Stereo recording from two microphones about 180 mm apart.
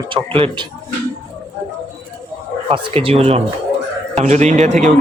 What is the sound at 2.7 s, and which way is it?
Speech, 30° right (ahead or behind).